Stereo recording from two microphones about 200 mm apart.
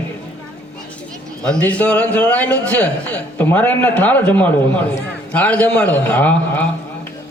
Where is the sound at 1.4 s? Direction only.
5° left (ahead or behind).